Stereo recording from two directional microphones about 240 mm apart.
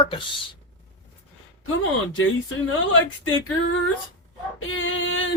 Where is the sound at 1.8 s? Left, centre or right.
Left.